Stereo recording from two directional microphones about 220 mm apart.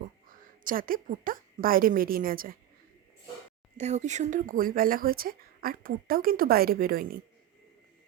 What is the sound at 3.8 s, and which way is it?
A woman's voice, 30° right (ahead or behind).